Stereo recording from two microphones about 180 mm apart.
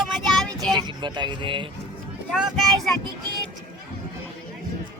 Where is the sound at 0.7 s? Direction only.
25° right (ahead or behind).